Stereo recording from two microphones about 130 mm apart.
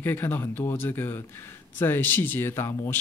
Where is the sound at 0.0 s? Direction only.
15° left (ahead or behind).